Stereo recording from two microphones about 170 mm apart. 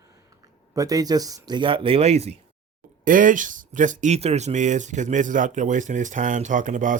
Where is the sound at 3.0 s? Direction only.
50° right (ahead or behind).